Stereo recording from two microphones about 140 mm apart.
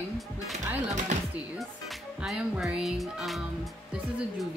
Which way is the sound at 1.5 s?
Centre (ahead or behind).